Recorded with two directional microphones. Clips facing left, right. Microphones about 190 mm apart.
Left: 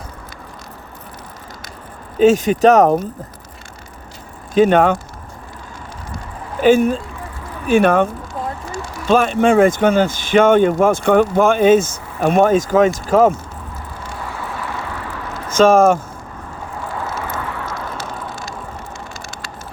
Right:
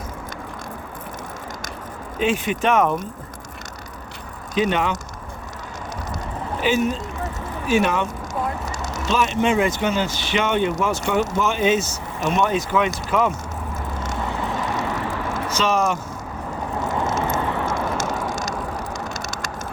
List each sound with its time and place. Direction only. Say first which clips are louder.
2.1 s speech: left 10 dB; 40° left (ahead or behind)
4.5 s speech: left 9 dB; 50° left (ahead or behind)
6.6 s speech: left 8 dB; 50° left (ahead or behind)
9.0 s speech: left 7 dB; 50° left (ahead or behind)
14.3 s vehicle: right 2 dB; 20° right (ahead or behind)
15.4 s speech: left 11 dB; 50° left (ahead or behind)
17.2 s vehicle: right 3 dB; 25° right (ahead or behind)
17.7 s a sound: right 4 dB; 50° right (ahead or behind)
19.1 s vehicle: right 3 dB; 40° right (ahead or behind)